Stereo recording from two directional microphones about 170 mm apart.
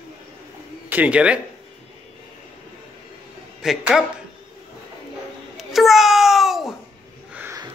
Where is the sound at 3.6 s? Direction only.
5° right (ahead or behind).